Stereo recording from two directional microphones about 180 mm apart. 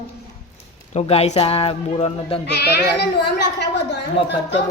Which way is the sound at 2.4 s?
65° left (ahead or behind).